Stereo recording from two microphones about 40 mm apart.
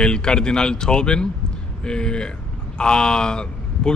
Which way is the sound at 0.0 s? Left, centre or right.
Left.